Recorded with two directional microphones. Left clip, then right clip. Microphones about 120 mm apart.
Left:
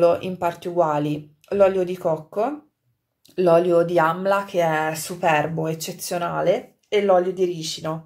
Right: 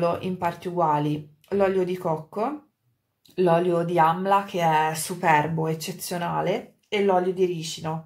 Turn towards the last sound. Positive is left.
turn(degrees=35)  # may be behind; listen again after turning